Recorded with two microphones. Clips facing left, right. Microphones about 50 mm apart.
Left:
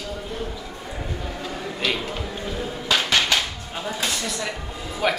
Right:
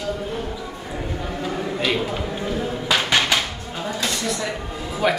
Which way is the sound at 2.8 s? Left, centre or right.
Centre.